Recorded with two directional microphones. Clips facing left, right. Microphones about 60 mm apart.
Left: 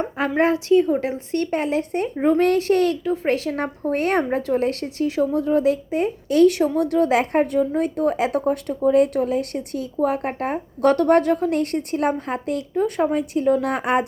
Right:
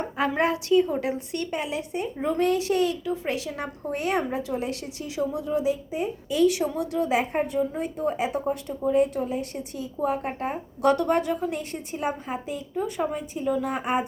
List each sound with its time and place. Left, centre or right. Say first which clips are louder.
0.2 s a woman's voice: left 4 dB; left
2.1 s speech: left 10 dB; left
2.4 s a woman's voice: left 2 dB; left